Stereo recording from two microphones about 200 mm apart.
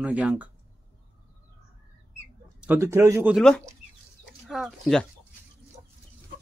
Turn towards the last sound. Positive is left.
turn(degrees=0)  # may be behind; listen again after turning